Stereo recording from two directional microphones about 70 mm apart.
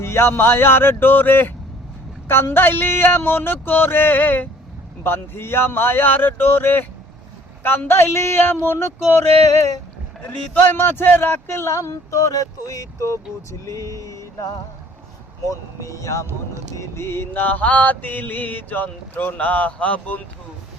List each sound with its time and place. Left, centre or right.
0.0 s speech: left
9.5 s speech: left
10.2 s speech: left
11.8 s speech: left
13.5 s vehicle: left
15.4 s speech: left
16.7 s mantra: left